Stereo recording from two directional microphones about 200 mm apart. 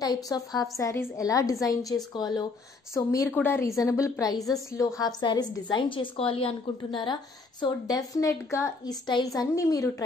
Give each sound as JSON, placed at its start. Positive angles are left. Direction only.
{"t": 0.0, "sound": "a woman's voice", "side_deg": 20}